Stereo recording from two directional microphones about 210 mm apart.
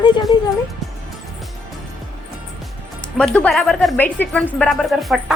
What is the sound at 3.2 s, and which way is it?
Speech, 5° left (ahead or behind).